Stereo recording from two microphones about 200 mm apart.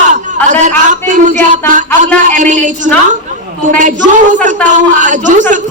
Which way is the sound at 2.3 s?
40° right (ahead or behind).